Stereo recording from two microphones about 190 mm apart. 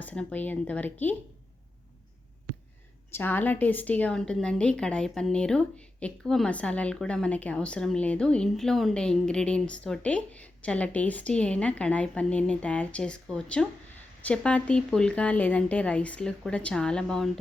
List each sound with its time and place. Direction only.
0.0 s speech: 5° left (ahead or behind)
3.1 s a woman's voice: 10° left (ahead or behind)